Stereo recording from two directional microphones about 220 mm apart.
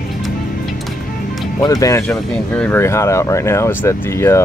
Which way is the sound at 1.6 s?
15° left (ahead or behind).